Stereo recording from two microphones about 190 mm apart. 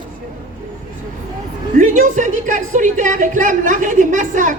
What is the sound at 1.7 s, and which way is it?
A woman's voice, 40° right (ahead or behind).